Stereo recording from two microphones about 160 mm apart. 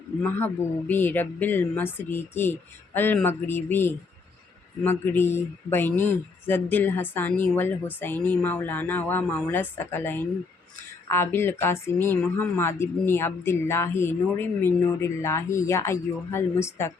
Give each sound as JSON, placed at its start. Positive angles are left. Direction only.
{"t": 0.2, "sound": "speech", "side_deg": 10}